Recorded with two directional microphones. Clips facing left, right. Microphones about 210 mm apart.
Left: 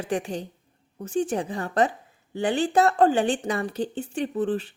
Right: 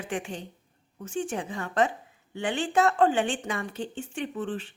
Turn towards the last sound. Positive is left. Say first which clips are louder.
# left 6 dB
turn(degrees=35)  # may be behind; listen again after turning